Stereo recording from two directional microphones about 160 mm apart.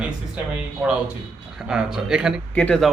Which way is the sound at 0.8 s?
5° right (ahead or behind).